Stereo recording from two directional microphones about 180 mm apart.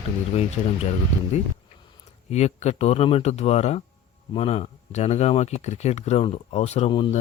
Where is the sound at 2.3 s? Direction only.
35° left (ahead or behind).